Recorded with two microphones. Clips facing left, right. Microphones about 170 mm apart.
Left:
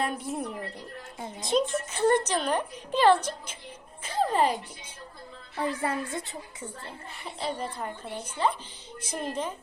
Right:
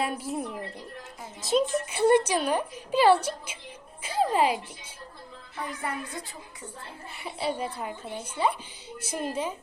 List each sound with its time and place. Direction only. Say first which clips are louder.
0.0 s a woman's voice: even; centre (ahead or behind)
4.0 s music: right 1 dB; 10° right (ahead or behind)
5.5 s a woman's voice: left 5 dB; 30° left (ahead or behind)
7.2 s a woman's voice: right 3 dB; 10° right (ahead or behind)